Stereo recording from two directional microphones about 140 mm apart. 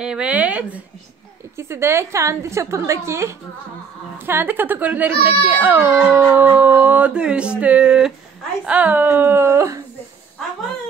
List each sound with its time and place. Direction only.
0.0 s a woman's voice: 5° right (ahead or behind)